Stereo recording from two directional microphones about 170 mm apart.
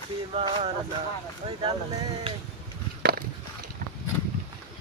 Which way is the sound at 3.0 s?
60° right (ahead or behind).